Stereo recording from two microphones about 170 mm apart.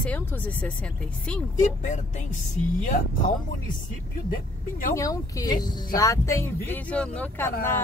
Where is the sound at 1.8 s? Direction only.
45° left (ahead or behind).